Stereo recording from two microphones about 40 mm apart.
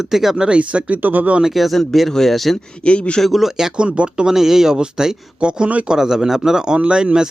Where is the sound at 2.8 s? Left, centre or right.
Left.